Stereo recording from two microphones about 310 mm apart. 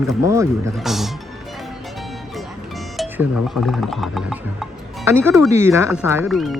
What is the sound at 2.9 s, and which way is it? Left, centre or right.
Speech, centre.